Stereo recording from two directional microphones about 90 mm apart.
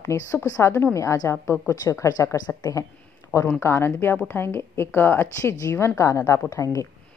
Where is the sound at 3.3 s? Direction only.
20° left (ahead or behind).